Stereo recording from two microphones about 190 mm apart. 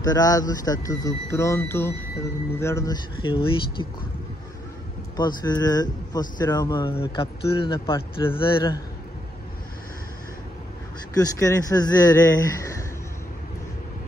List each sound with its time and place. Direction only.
0.0 s speech: 20° left (ahead or behind)
5.1 s speech: 20° left (ahead or behind)
11.1 s speech: 15° left (ahead or behind)